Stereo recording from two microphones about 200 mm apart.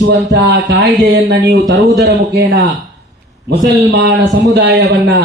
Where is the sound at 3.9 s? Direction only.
60° right (ahead or behind).